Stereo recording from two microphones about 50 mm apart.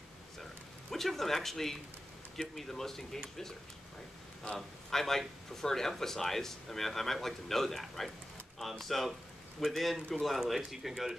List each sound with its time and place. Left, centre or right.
0.4 s a sound: centre
2.3 s speech: centre
4.4 s speech: centre